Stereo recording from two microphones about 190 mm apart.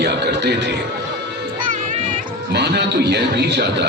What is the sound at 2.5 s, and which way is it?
Speech, 65° right (ahead or behind).